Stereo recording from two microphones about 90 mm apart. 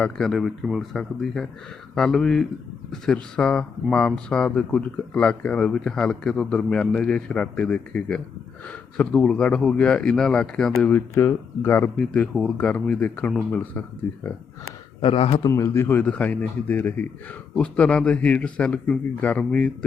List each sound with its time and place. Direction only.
0.2 s speech: centre (ahead or behind)
10.9 s speech: 30° left (ahead or behind)
11.9 s speech: 15° left (ahead or behind)
15.0 s speech: 90° left
15.4 s speech: 35° left (ahead or behind); by 19.7 s 15° left (ahead or behind)